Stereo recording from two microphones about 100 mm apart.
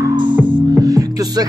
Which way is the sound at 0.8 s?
35° right (ahead or behind).